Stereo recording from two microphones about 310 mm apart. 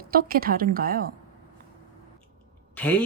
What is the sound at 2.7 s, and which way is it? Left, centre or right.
Speech, centre.